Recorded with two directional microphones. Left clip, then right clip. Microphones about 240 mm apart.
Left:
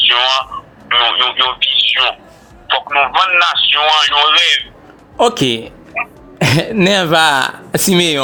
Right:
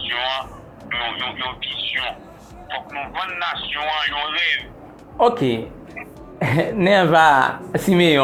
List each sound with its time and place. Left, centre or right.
0.0 s a sound: left
0.9 s speech: left
6.0 s throat clearing: left
6.7 s speech: left